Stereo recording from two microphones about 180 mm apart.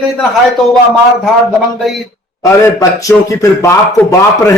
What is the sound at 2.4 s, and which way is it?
Speech, 20° left (ahead or behind).